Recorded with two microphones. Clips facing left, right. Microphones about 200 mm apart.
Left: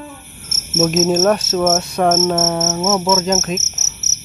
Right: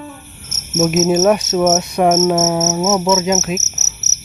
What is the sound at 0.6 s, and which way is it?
Cricket, centre (ahead or behind).